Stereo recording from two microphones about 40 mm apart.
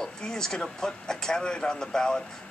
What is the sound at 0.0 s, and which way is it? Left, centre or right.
Speech, centre.